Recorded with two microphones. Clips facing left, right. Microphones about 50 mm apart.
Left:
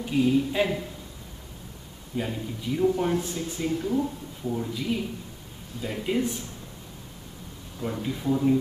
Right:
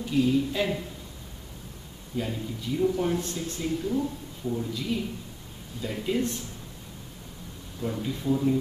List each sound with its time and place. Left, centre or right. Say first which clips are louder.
0.0 s speech: left 1 dB; centre
2.1 s speech: left 1 dB; centre
7.8 s speech: left 1 dB; centre